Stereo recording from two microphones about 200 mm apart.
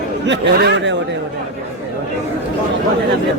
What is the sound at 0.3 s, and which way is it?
Speech, 65° right (ahead or behind).